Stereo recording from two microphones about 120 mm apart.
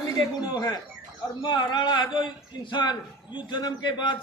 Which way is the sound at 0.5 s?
35° left (ahead or behind).